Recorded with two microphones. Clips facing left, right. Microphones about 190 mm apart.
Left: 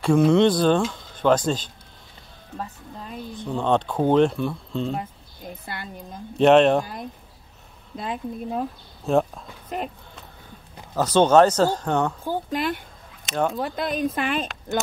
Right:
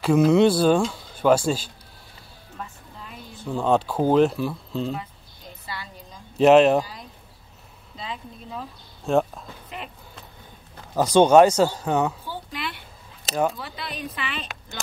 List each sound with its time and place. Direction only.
0.0 s speech: 5° right (ahead or behind)
2.5 s music: 35° left (ahead or behind)
3.3 s speech: 5° right (ahead or behind)
4.9 s a sound: 55° left (ahead or behind)
6.3 s speech: 5° right (ahead or behind)
7.9 s a woman's voice: 55° left (ahead or behind)
9.0 s speech: centre (ahead or behind)
9.7 s a woman's voice: 45° left (ahead or behind)
11.0 s speech: 10° right (ahead or behind)
12.3 s a woman's voice: 45° left (ahead or behind)